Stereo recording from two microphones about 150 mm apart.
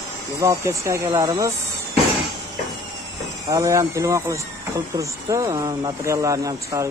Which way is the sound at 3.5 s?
20° right (ahead or behind).